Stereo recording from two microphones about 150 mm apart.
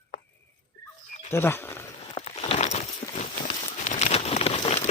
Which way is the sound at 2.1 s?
40° left (ahead or behind).